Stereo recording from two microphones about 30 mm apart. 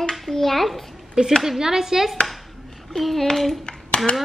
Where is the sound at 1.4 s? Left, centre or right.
Centre.